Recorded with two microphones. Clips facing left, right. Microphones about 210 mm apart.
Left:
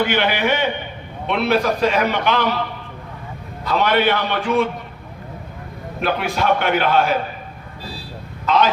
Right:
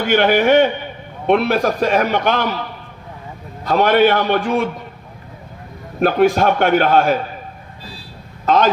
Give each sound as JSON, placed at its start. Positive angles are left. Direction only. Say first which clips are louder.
{"t": 0.0, "sound": "a man's voice", "louder": "right 5 dB", "side_deg": -45}
{"t": 3.6, "sound": "a man's voice", "louder": "right 5 dB", "side_deg": -50}
{"t": 6.0, "sound": "a man's voice", "louder": "right 8 dB", "side_deg": -45}
{"t": 8.4, "sound": "a man's voice", "louder": "right 3 dB", "side_deg": -45}